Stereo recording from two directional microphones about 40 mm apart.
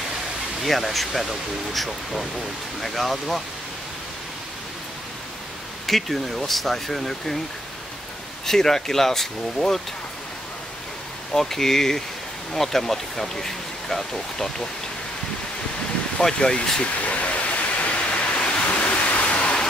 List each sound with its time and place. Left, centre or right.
0.7 s speech: centre
5.9 s speech: centre
8.5 s speech: centre
11.3 s speech: centre
16.2 s speech: centre
16.8 s pink noise: left